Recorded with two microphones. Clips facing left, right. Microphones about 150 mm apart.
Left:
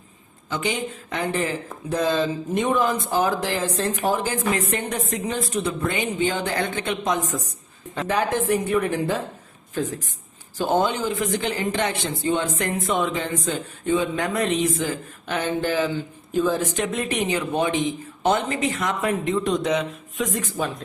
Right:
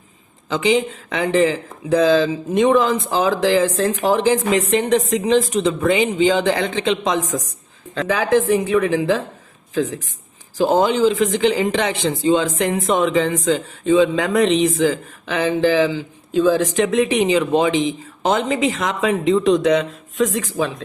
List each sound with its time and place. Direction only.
0.5 s speech: 90° right
10.6 s speech: 90° right